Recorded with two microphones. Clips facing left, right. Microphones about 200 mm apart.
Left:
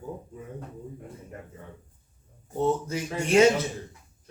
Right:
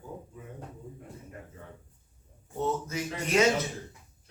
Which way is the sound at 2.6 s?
30° left (ahead or behind).